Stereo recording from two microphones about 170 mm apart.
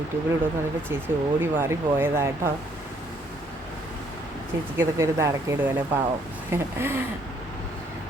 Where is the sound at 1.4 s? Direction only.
10° right (ahead or behind).